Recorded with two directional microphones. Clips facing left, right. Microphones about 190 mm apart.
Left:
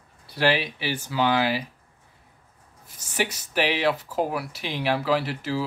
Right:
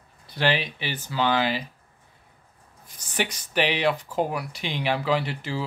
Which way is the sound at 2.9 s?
5° left (ahead or behind).